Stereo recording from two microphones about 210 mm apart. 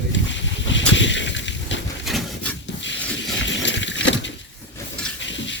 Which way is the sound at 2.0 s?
Centre (ahead or behind).